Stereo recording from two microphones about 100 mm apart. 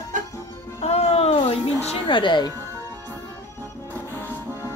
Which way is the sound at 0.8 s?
90° left.